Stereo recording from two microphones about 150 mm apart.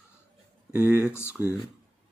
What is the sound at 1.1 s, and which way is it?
Speech, 15° left (ahead or behind).